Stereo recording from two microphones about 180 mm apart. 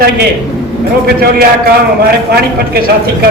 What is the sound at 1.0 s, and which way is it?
A man's voice, 60° right (ahead or behind).